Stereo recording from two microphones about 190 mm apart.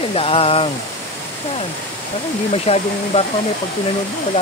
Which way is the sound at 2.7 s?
30° left (ahead or behind).